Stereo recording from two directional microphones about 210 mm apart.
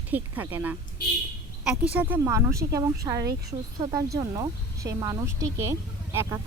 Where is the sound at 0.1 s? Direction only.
10° right (ahead or behind).